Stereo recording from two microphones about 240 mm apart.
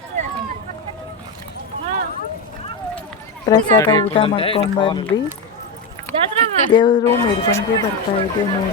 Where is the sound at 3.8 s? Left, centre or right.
Centre.